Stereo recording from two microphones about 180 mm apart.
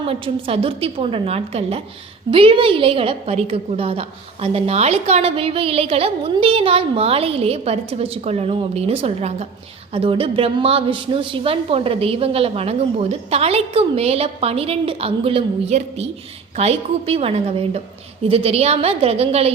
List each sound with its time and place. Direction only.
0.0 s a woman's voice: 30° right (ahead or behind)